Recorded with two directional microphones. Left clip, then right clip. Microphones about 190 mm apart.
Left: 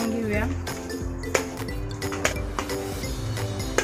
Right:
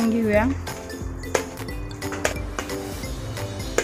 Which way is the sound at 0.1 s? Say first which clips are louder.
Right 7 dB; 50° right (ahead or behind).